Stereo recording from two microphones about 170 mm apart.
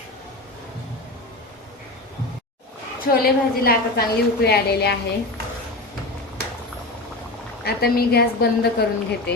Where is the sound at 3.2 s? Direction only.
60° left (ahead or behind).